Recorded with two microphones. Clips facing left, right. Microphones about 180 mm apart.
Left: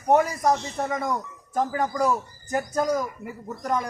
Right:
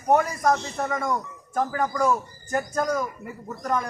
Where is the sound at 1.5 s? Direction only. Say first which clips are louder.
Even; 15° left (ahead or behind).